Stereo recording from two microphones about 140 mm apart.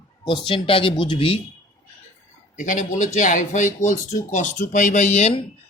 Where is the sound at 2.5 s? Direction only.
65° left (ahead or behind).